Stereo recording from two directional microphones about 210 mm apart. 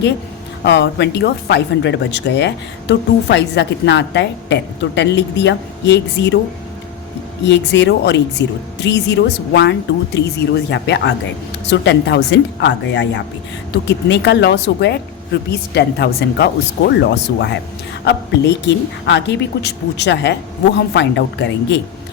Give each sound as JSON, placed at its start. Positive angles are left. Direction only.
{"t": 0.6, "sound": "speech", "side_deg": 55}
{"t": 7.4, "sound": "speech", "side_deg": 55}